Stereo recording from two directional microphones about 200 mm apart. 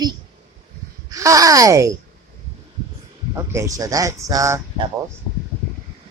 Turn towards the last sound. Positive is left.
turn(degrees=-15)  # may be behind; listen again after turning